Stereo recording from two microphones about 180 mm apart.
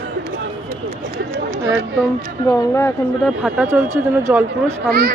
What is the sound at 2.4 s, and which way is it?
Speech, 15° left (ahead or behind).